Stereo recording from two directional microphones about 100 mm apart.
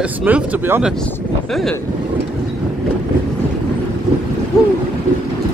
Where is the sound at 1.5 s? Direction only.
5° left (ahead or behind).